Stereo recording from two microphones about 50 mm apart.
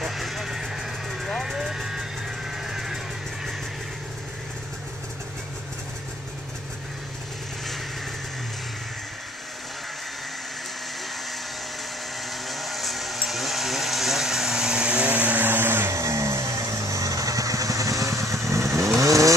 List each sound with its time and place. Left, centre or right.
0.0 s vehicle: centre
12.4 s a sound: centre; by 15.4 s right
15.4 s blender: right
15.9 s vehicle: right